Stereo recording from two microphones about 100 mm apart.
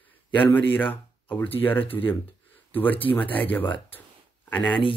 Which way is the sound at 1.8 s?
65° left (ahead or behind).